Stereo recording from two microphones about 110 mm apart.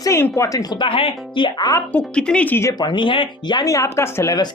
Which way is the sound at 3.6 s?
30° left (ahead or behind).